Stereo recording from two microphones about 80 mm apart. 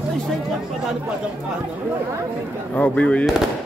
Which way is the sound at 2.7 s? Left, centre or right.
Centre.